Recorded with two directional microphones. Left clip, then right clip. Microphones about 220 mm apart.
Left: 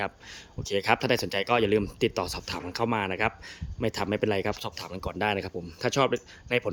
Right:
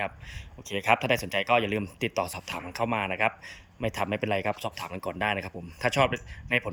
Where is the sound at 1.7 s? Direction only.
Centre (ahead or behind).